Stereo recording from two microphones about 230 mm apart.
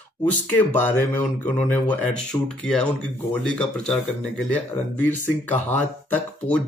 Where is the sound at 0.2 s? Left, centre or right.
Centre.